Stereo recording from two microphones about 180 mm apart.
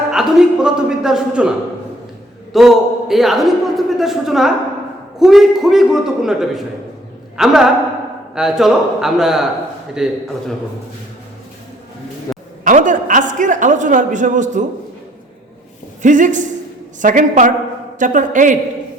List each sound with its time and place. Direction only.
0.1 s a man's voice: 5° right (ahead or behind)
12.6 s a man's voice: 45° right (ahead or behind)
16.0 s a woman's voice: 45° right (ahead or behind)